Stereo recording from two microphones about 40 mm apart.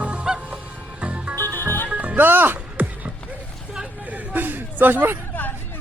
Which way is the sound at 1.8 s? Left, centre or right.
Right.